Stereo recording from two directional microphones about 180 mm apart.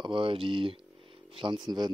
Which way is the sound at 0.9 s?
30° right (ahead or behind).